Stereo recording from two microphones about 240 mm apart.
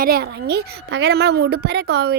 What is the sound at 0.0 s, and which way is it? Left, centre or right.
A woman's voice, right.